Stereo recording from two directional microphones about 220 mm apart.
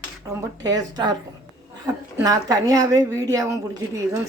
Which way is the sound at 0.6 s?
15° right (ahead or behind).